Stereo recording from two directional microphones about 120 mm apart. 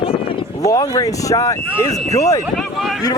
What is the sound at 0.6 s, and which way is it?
Speech, 30° left (ahead or behind).